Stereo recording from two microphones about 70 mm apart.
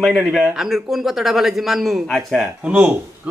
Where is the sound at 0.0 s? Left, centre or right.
Centre.